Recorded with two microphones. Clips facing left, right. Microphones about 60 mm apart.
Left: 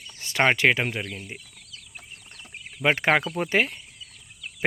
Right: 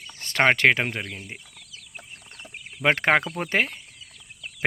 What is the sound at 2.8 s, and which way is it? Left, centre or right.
Speech, right.